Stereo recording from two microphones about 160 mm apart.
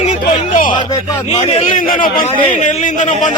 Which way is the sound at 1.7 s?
55° left (ahead or behind).